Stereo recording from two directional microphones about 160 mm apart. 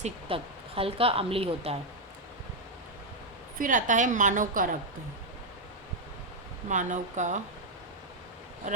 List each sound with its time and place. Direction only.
0.0 s a woman's voice: 35° right (ahead or behind)
3.6 s a woman's voice: 55° right (ahead or behind)
6.7 s a woman's voice: 50° right (ahead or behind)
8.7 s speech: 55° right (ahead or behind)